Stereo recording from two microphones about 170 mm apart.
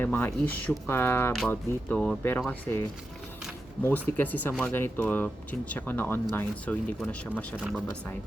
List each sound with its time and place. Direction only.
0.0 s speech: 10° left (ahead or behind)
3.8 s speech: 10° left (ahead or behind)
7.5 s speech: 5° right (ahead or behind)